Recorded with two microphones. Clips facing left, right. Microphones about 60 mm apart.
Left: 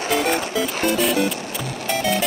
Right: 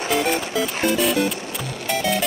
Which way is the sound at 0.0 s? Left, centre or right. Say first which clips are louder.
Left 1 dB; centre.